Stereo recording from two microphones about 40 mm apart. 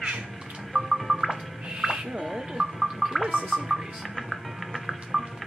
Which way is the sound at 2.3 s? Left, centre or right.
Centre.